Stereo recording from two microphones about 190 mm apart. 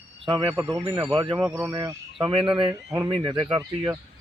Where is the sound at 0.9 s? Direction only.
20° right (ahead or behind).